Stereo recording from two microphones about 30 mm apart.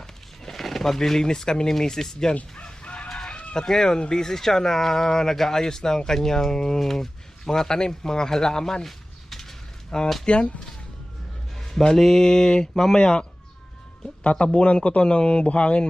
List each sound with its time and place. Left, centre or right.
0.4 s a sound: centre
1.3 s speech: left
2.8 s chicken: left
3.5 s speech: centre
8.9 s a sound: centre
9.9 s speech: left
10.2 s music: left
11.5 s a sound: centre
11.9 s speech: centre
13.0 s music: left
14.3 s speech: left
15.0 s music: left